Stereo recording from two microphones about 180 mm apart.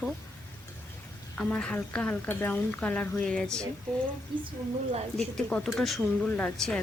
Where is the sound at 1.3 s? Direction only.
5° left (ahead or behind).